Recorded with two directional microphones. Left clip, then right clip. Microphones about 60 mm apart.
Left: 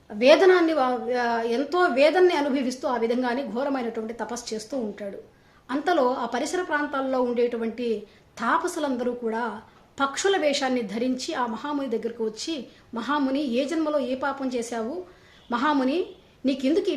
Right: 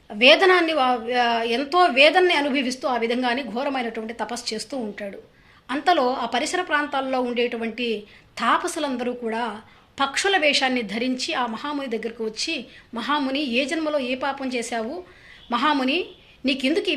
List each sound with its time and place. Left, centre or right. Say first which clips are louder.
0.2 s a woman's voice: right 2 dB; left
5.6 s a woman's voice: right 3 dB; left
16.5 s a woman's voice: right 1 dB; left